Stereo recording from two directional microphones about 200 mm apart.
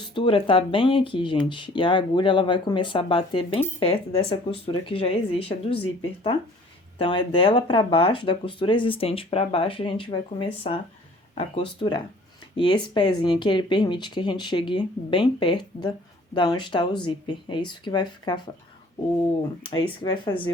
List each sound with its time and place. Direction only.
0.1 s speech: 25° left (ahead or behind)
7.0 s speech: 25° left (ahead or behind)
19.6 s speech: 25° left (ahead or behind)